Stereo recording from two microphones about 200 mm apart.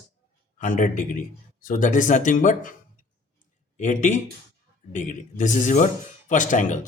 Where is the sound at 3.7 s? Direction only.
40° left (ahead or behind).